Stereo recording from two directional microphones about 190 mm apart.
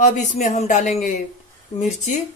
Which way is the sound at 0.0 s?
40° left (ahead or behind).